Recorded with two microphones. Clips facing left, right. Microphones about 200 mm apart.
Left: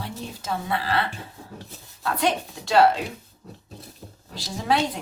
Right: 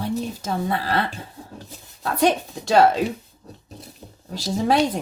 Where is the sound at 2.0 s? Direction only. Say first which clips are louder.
Right 4 dB; 45° right (ahead or behind).